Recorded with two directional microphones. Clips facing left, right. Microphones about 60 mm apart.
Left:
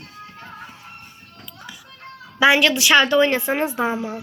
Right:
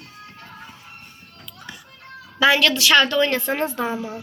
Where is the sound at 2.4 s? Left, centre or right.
Centre.